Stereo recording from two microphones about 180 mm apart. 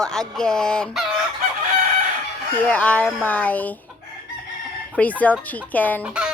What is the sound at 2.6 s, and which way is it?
Speech, 5° left (ahead or behind).